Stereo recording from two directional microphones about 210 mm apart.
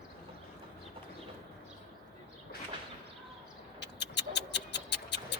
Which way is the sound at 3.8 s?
55° left (ahead or behind).